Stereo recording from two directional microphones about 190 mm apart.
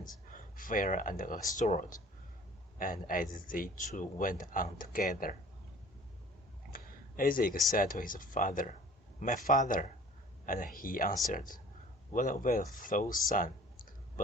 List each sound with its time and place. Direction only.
0.3 s speech: 45° left (ahead or behind)
6.7 s a sound: 50° left (ahead or behind)
7.8 s speech: 45° left (ahead or behind)